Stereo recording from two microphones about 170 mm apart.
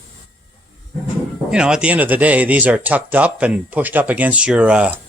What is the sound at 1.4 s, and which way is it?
Speech, 5° right (ahead or behind).